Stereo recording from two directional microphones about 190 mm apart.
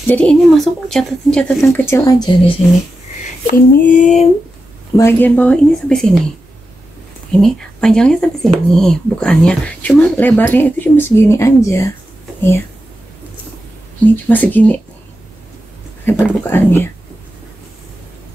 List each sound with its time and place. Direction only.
0.0 s a woman's voice: 5° left (ahead or behind)
1.6 s speech: 15° left (ahead or behind)
3.4 s female singing: 40° left (ahead or behind)
4.9 s speech: 10° left (ahead or behind)
7.3 s a woman's voice: 5° left (ahead or behind)
14.2 s speech: 10° left (ahead or behind)
16.1 s speech: 10° left (ahead or behind)